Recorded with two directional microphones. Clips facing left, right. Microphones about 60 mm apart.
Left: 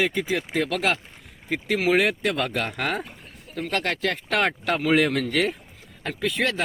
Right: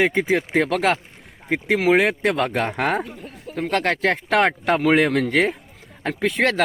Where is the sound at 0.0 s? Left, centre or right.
Right.